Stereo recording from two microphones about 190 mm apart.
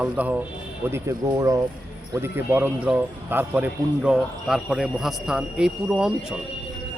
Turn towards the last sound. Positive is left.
turn(degrees=-5)  # may be behind; listen again after turning